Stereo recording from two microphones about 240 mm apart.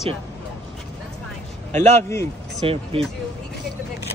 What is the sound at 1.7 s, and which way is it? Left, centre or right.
Speech, centre.